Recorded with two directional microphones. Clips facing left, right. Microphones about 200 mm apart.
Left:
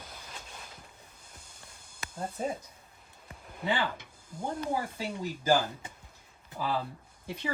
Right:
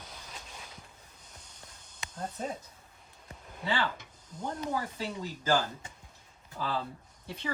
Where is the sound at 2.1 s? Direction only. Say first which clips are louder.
Left 3 dB; 10° left (ahead or behind).